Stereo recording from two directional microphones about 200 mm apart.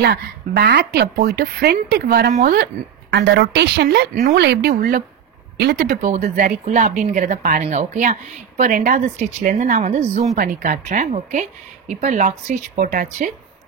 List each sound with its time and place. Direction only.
0.0 s a woman's voice: 55° right (ahead or behind)
4.1 s speech: 35° right (ahead or behind)
4.4 s speech: 55° right (ahead or behind)